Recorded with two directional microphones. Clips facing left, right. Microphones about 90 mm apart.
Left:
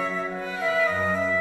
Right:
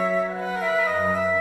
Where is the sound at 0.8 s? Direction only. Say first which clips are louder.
Right 2 dB; 10° right (ahead or behind).